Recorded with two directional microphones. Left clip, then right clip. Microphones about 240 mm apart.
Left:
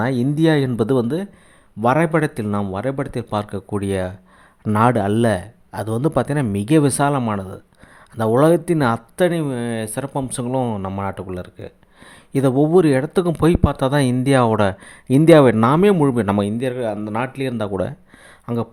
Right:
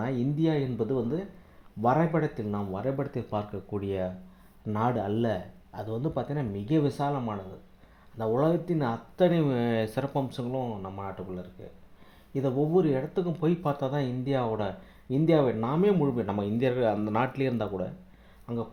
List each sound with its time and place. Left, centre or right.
0.0 s speech: left
10.2 s speech: left
16.6 s speech: centre